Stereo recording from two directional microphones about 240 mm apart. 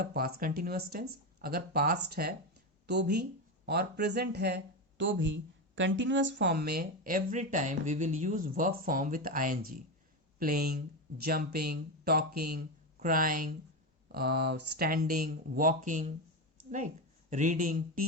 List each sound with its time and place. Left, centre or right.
0.0 s speech: right